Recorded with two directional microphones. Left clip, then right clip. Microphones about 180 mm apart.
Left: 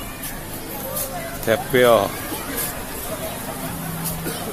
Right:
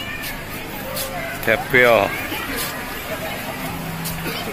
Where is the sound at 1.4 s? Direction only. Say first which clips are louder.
Right 1 dB; 5° left (ahead or behind).